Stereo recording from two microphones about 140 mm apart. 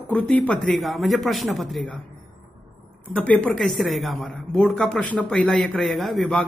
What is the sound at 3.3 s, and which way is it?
A man's voice, 5° left (ahead or behind).